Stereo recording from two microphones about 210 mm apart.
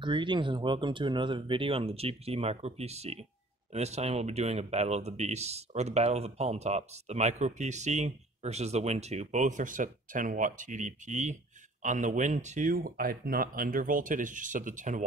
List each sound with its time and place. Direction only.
0.0 s speech: 20° right (ahead or behind)